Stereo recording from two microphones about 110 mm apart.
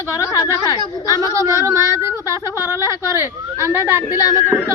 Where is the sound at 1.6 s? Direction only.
25° right (ahead or behind).